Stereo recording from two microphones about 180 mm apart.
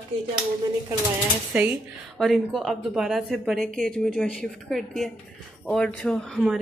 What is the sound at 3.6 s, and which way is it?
Speech, 50° right (ahead or behind).